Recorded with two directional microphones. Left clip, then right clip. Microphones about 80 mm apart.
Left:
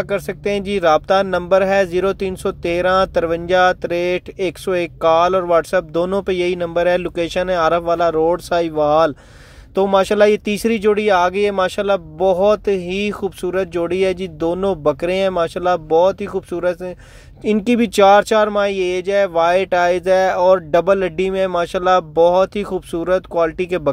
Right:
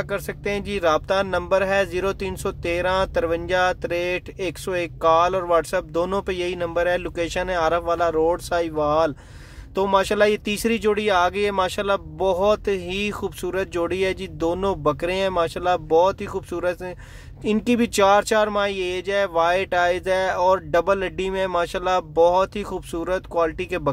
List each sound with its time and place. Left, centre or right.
0.0 s speech: left
17.6 s speech: left